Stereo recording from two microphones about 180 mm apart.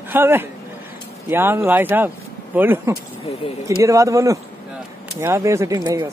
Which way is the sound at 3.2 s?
35° left (ahead or behind).